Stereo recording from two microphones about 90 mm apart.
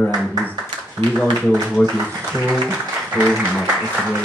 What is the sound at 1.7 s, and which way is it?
Speech, centre (ahead or behind).